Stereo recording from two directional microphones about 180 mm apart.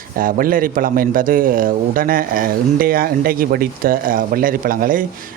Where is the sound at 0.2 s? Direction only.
50° right (ahead or behind).